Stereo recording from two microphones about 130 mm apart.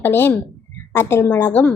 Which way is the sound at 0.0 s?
15° left (ahead or behind).